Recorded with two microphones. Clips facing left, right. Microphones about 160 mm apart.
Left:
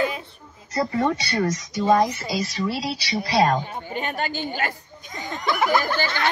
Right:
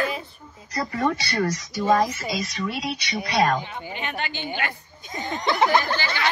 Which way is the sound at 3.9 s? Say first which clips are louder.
Left 5 dB; 40° left (ahead or behind).